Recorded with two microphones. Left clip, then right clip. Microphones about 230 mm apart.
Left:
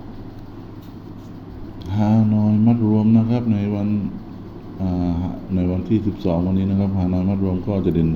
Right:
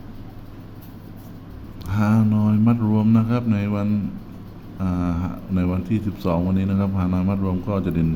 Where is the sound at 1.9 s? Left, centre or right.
Centre.